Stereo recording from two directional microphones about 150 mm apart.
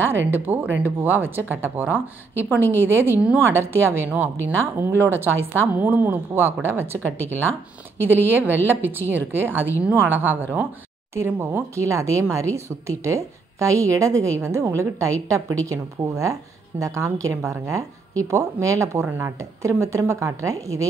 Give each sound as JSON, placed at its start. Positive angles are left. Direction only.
{"t": 0.0, "sound": "speech", "side_deg": -15}